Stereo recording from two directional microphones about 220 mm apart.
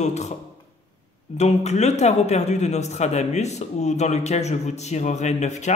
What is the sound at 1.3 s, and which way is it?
Speech, 30° left (ahead or behind).